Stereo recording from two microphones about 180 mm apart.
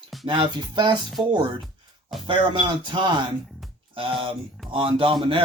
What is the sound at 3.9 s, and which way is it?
Speech, 30° right (ahead or behind).